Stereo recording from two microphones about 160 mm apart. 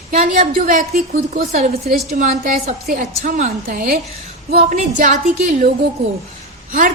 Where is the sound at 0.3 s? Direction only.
55° right (ahead or behind).